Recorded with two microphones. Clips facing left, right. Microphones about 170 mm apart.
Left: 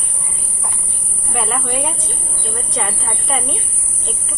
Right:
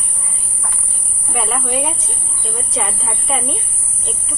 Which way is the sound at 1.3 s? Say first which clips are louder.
Even; centre (ahead or behind).